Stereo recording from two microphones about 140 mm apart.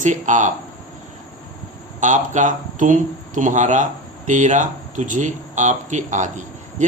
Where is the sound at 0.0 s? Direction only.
60° right (ahead or behind).